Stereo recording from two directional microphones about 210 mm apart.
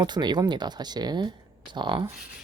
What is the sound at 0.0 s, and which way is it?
Speech, 20° right (ahead or behind).